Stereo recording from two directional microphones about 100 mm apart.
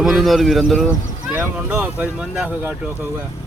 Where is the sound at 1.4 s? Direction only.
20° right (ahead or behind).